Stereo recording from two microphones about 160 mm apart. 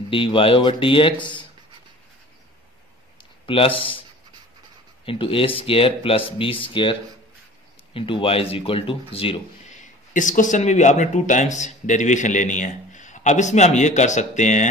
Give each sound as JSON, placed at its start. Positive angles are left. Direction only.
{"t": 0.1, "sound": "speech", "side_deg": 35}
{"t": 3.2, "sound": "a sound", "side_deg": 35}
{"t": 5.0, "sound": "speech", "side_deg": 35}
{"t": 9.8, "sound": "speech", "side_deg": 55}